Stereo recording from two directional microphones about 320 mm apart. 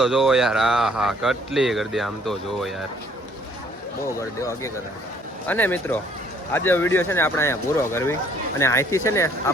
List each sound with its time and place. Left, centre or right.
0.0 s speech: centre
4.2 s speech: centre